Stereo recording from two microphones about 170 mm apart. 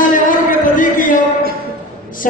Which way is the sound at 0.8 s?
50° left (ahead or behind).